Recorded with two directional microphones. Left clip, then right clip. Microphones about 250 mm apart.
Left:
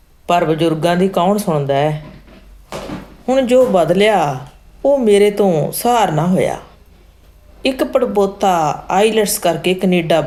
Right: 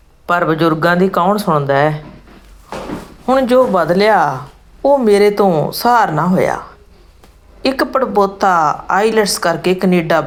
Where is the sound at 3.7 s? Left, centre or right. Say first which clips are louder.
Right 1 dB; centre.